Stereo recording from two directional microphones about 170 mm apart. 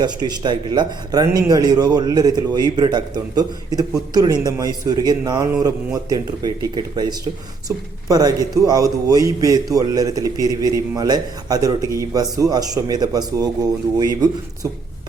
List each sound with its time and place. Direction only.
0.0 s a man's voice: 25° right (ahead or behind)